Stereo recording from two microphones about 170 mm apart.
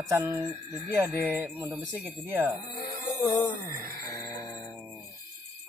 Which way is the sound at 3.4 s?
20° left (ahead or behind).